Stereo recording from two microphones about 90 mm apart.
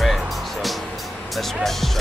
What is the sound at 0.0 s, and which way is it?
Music, centre (ahead or behind).